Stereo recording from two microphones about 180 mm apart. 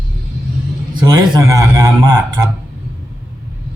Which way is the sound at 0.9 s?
25° right (ahead or behind).